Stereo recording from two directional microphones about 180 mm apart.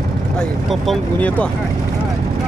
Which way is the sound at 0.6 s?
5° left (ahead or behind).